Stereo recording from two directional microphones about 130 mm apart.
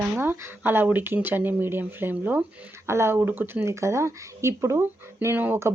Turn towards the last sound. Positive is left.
turn(degrees=-20)  # may be behind; listen again after turning